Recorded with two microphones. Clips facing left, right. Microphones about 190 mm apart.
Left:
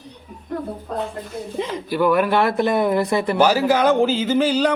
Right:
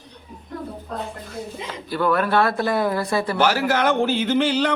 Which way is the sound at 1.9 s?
15° left (ahead or behind).